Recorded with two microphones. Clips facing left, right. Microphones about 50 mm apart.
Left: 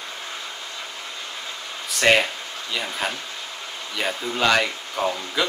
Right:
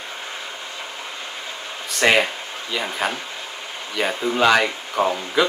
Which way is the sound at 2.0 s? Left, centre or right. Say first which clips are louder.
Right 1 dB; centre.